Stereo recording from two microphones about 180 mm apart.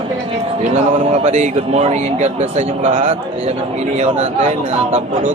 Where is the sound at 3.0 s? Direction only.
45° right (ahead or behind).